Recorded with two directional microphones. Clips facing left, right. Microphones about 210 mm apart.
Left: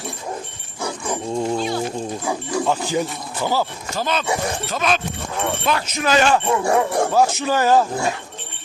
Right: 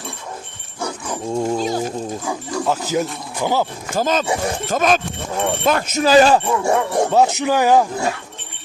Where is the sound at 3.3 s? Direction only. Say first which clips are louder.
Right 2 dB; 15° right (ahead or behind).